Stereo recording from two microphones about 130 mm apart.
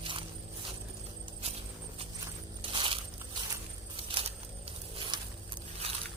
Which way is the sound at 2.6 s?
40° right (ahead or behind).